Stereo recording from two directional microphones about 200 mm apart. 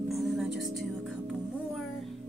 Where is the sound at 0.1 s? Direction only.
Centre (ahead or behind).